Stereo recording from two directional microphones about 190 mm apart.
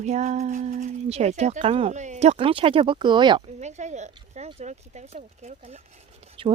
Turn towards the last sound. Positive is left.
turn(degrees=-30)  # may be behind; listen again after turning